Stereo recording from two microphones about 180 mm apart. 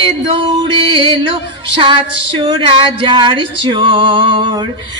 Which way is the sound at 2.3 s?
25° right (ahead or behind).